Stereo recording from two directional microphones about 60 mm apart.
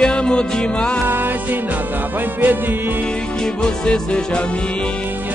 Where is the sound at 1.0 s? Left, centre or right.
Right.